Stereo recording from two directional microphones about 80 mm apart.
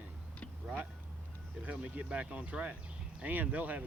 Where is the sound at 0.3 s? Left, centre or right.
Centre.